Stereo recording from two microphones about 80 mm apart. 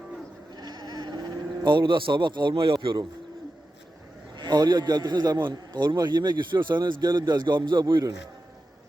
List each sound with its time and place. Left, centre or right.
0.5 s sheep: right
4.4 s a man's voice: right
5.5 s a man's voice: right